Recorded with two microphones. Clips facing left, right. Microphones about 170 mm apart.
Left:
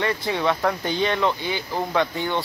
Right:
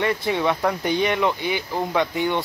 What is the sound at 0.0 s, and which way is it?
A man's voice, 20° right (ahead or behind).